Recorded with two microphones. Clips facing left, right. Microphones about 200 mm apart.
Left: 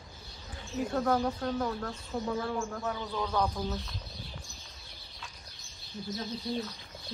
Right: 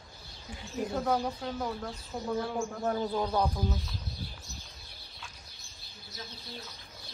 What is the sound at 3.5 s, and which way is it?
Speech, centre (ahead or behind).